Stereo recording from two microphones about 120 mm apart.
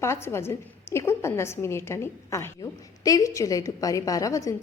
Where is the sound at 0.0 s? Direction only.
20° left (ahead or behind).